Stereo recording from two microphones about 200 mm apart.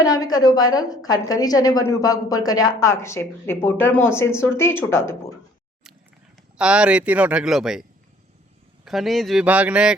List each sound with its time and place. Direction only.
0.0 s a woman's voice: 20° left (ahead or behind)
6.6 s speech: 5° right (ahead or behind)